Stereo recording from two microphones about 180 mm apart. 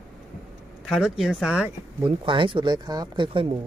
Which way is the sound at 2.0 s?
30° right (ahead or behind).